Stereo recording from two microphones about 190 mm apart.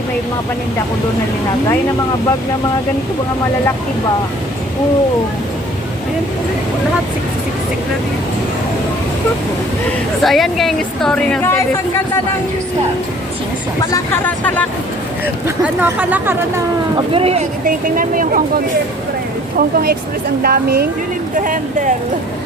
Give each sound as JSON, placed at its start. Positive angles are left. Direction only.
{"t": 10.2, "sound": "a woman's voice", "side_deg": 0}
{"t": 13.9, "sound": "speech", "side_deg": 10}
{"t": 15.4, "sound": "speech", "side_deg": -10}
{"t": 17.2, "sound": "speech", "side_deg": -30}
{"t": 17.7, "sound": "speech", "side_deg": -45}